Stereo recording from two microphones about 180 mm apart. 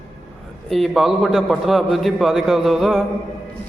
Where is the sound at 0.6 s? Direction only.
Centre (ahead or behind).